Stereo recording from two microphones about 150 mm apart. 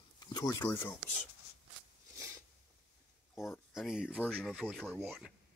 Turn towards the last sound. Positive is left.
turn(degrees=0)  # may be behind; listen again after turning